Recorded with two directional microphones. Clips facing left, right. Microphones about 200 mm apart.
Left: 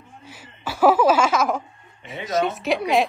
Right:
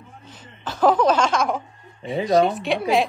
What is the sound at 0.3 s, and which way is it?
Laughter, 10° left (ahead or behind).